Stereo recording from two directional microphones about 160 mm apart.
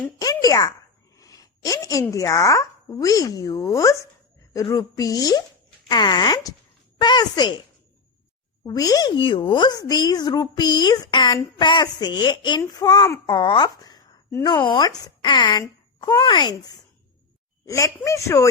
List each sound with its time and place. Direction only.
0.2 s a child's voice: 25° left (ahead or behind)
8.6 s speech: 25° left (ahead or behind)